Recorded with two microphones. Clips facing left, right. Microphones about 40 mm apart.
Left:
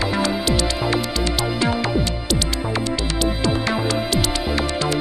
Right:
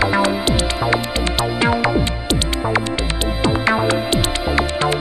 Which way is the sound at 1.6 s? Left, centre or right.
Right.